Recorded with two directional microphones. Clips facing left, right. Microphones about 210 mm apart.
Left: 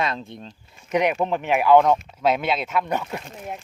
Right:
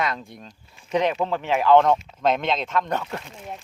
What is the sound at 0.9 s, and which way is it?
Speech, 15° left (ahead or behind).